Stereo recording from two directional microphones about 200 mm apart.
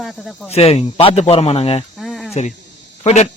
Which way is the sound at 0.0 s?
Centre (ahead or behind).